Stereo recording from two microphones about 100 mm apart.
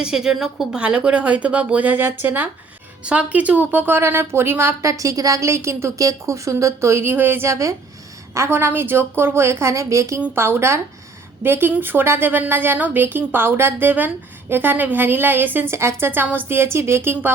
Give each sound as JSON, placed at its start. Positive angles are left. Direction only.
{"t": 0.0, "sound": "a woman's voice", "side_deg": -5}
{"t": 10.2, "sound": "a woman's voice", "side_deg": -15}
{"t": 10.4, "sound": "a woman's voice", "side_deg": -25}